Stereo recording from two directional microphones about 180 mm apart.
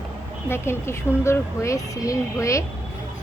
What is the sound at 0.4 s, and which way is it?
Speech, 15° left (ahead or behind).